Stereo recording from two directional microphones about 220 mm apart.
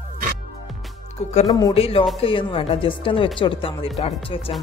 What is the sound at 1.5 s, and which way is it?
Speech, 20° left (ahead or behind).